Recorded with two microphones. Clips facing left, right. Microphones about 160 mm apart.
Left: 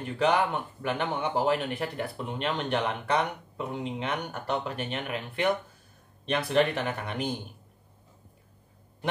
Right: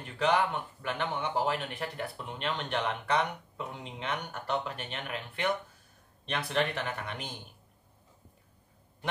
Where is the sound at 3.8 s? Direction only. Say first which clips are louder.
Left 5 dB; 10° left (ahead or behind).